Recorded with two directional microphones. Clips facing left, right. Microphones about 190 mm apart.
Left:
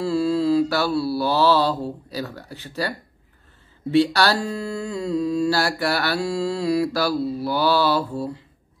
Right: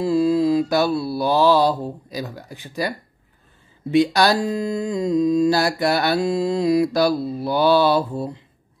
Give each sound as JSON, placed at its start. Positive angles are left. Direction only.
{"t": 0.0, "sound": "mantra", "side_deg": -15}
{"t": 3.9, "sound": "speech", "side_deg": -15}